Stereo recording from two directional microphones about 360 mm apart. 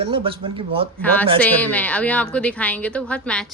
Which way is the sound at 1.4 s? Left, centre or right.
Centre.